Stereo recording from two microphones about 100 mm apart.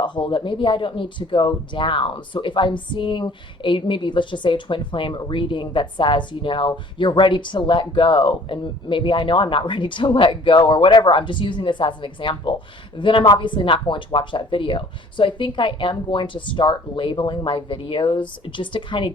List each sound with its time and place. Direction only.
0.0 s speech: 50° left (ahead or behind)